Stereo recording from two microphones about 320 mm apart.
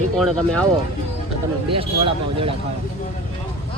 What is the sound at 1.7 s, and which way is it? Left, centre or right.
Speech, centre.